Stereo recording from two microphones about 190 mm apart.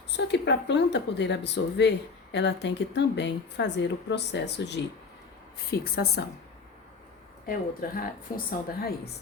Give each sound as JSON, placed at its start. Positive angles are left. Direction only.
{"t": 0.1, "sound": "a woman's voice", "side_deg": 65}
{"t": 7.4, "sound": "a woman's voice", "side_deg": 50}